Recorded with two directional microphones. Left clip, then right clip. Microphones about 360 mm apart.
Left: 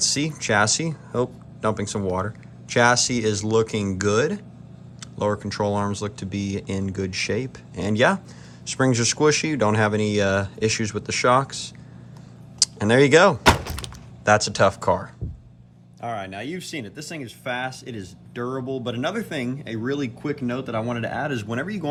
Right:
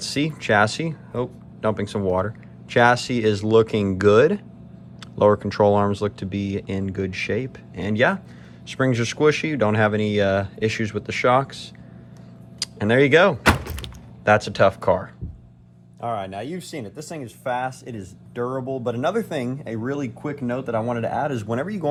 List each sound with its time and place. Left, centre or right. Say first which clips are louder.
0.0 s speech: left 1 dB; centre
12.5 s door: left 1 dB; centre
16.0 s speech: right 3 dB; centre
16.8 s speech: right 1 dB; centre